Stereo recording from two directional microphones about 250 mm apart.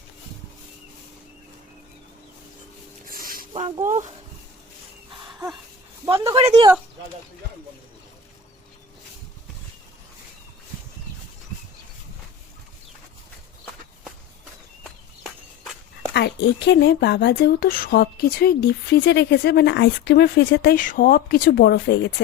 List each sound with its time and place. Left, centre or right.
3.1 s a sound: right
6.1 s speech: centre
6.3 s speech: right
16.1 s speech: left